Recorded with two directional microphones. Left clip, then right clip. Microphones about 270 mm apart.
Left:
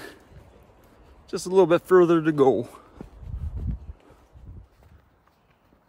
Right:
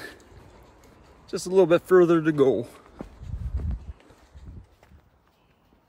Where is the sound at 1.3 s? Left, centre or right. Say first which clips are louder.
Even; centre.